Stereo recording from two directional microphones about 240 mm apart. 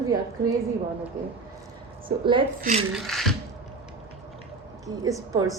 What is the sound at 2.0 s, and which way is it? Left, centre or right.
Speech, right.